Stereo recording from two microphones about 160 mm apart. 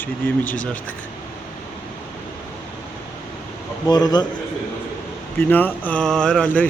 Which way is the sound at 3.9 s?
25° left (ahead or behind).